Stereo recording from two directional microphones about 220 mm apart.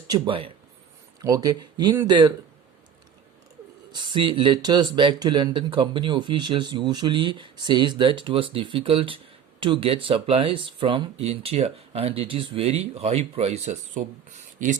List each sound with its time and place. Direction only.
0.1 s speech: 25° right (ahead or behind)
3.9 s speech: 20° right (ahead or behind)